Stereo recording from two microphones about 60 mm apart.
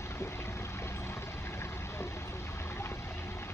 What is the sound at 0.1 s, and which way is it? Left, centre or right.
Vehicle, left.